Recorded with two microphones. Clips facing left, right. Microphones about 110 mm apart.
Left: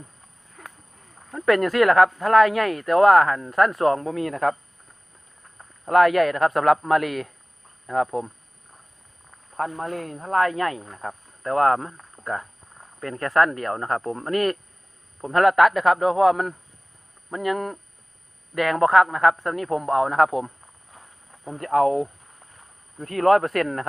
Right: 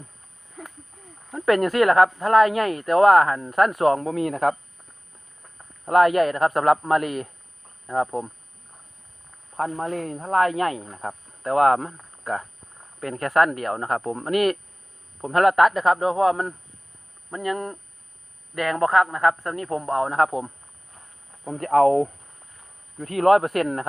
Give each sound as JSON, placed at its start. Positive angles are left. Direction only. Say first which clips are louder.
{"t": 1.5, "sound": "speech", "louder": "even", "side_deg": 0}
{"t": 4.1, "sound": "speech", "louder": "right 1 dB", "side_deg": -30}
{"t": 5.8, "sound": "speech", "louder": "even", "side_deg": -5}
{"t": 10.1, "sound": "speech", "louder": "right 3 dB", "side_deg": -10}
{"t": 10.9, "sound": "speech", "louder": "right 1 dB", "side_deg": -20}
{"t": 21.6, "sound": "speech", "louder": "right 3 dB", "side_deg": -35}
{"t": 23.0, "sound": "speech", "louder": "right 1 dB", "side_deg": -20}